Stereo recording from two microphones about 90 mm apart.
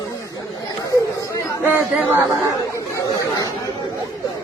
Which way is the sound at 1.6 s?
25° right (ahead or behind).